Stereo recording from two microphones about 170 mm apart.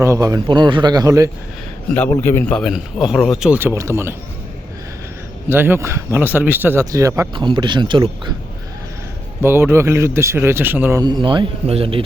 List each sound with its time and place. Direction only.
0.0 s a man's voice: 20° right (ahead or behind)
2.0 s a man's voice: 15° left (ahead or behind)
2.6 s speech: 5° right (ahead or behind)
5.5 s a man's voice: 15° right (ahead or behind); by 8.3 s 30° right (ahead or behind)
9.4 s speech: 15° right (ahead or behind)
11.0 s a man's voice: 25° right (ahead or behind)